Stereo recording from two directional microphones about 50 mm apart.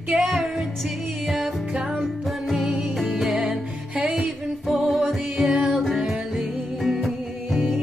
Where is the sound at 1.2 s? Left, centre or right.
Centre.